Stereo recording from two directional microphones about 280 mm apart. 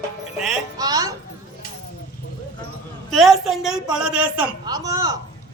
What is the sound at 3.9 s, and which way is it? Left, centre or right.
A man's voice, centre.